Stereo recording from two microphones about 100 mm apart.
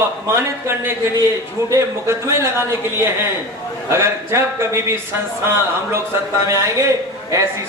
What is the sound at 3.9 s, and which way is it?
A man's voice, 30° right (ahead or behind).